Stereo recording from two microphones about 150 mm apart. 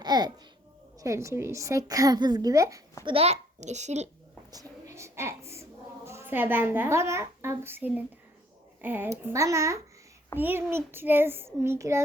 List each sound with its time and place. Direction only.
0.0 s a child's voice: 30° right (ahead or behind)
3.0 s a child's voice: 40° right (ahead or behind)
4.5 s a sound: 20° right (ahead or behind)
6.1 s a child's voice: 15° right (ahead or behind)